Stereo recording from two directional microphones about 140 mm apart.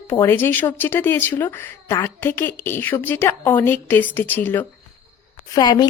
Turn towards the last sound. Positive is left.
turn(degrees=30)  # may be behind; listen again after turning